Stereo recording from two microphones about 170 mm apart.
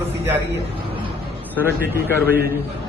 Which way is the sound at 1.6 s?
10° right (ahead or behind).